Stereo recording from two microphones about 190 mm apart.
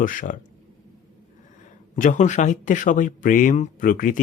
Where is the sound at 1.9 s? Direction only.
40° left (ahead or behind).